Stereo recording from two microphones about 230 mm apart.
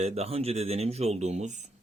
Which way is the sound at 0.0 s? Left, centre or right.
Right.